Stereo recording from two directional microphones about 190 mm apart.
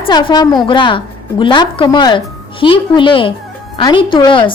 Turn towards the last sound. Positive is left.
turn(degrees=25)  # may be behind; listen again after turning